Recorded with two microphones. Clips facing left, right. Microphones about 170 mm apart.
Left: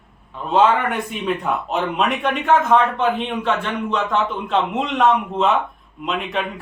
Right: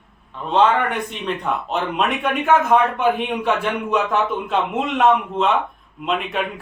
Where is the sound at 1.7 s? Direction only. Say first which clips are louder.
Left 1 dB; centre (ahead or behind).